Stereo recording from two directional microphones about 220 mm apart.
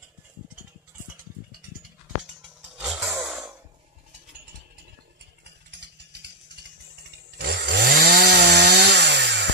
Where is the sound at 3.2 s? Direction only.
10° right (ahead or behind).